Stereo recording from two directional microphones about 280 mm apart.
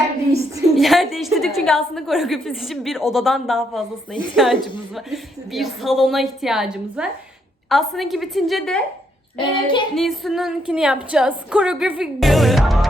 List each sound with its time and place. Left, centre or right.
0.8 s a woman's voice: centre
9.4 s child singing: centre
9.9 s a woman's voice: centre